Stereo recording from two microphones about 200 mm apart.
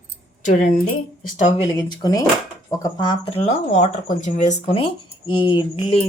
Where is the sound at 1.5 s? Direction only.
20° left (ahead or behind).